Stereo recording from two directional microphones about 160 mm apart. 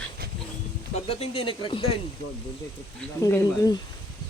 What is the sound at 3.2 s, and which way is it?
Speech, 20° left (ahead or behind).